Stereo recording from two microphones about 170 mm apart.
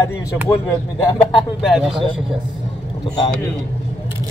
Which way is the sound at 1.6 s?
Centre (ahead or behind).